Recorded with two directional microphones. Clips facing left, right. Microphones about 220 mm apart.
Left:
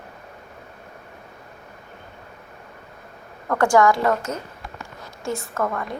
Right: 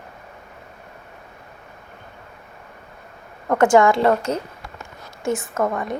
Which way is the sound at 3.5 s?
20° right (ahead or behind).